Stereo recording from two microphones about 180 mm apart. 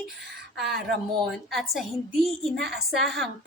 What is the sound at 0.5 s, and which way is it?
A woman's voice, centre (ahead or behind).